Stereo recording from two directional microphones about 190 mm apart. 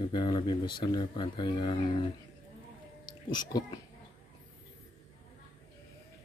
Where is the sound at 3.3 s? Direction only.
20° left (ahead or behind).